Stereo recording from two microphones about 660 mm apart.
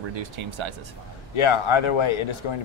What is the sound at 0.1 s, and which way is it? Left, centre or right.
Speech, right.